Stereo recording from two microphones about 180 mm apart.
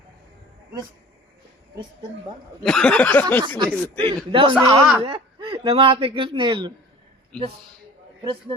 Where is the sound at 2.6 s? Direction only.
5° left (ahead or behind).